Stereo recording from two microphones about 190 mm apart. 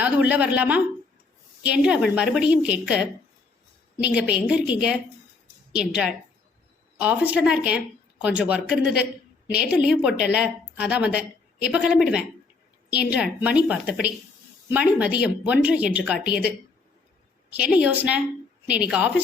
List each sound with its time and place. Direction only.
0.0 s a woman's voice: 10° right (ahead or behind)
12.9 s a woman's voice: 55° left (ahead or behind)
13.1 s a woman's voice: 5° right (ahead or behind)
17.5 s a woman's voice: 5° right (ahead or behind)